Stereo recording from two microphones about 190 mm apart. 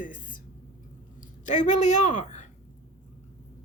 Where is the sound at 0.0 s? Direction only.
45° left (ahead or behind).